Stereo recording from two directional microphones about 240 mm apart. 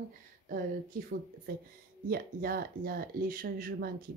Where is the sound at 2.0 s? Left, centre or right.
Right.